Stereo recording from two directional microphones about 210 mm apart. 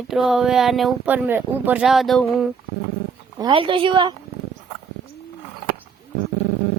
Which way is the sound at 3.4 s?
25° right (ahead or behind).